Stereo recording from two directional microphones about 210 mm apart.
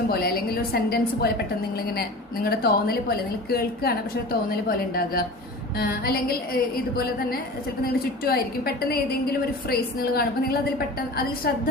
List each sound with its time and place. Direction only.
0.1 s a woman's voice: 45° left (ahead or behind)
7.9 s a woman's voice: 45° left (ahead or behind)